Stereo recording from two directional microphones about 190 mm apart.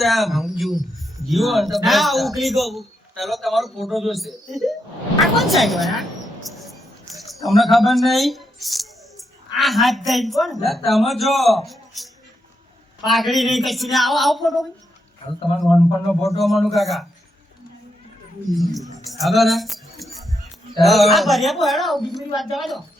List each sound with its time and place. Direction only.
0.0 s a man's voice: centre (ahead or behind)
7.1 s a sound: centre (ahead or behind)
7.4 s a man's voice: centre (ahead or behind)
13.1 s a man's voice: centre (ahead or behind)
15.4 s a man's voice: 25° left (ahead or behind)
16.1 s a man's voice: centre (ahead or behind)
19.2 s music: centre (ahead or behind)
20.8 s a man's voice: centre (ahead or behind)